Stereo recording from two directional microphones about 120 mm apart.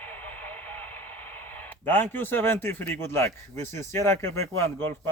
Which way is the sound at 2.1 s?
15° left (ahead or behind).